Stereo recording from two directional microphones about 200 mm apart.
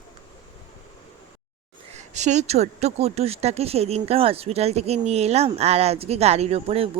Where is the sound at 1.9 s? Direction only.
35° right (ahead or behind).